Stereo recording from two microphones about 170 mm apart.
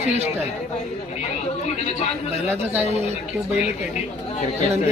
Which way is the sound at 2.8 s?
40° right (ahead or behind).